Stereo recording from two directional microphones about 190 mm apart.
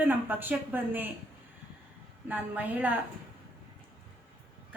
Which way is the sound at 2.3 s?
10° right (ahead or behind).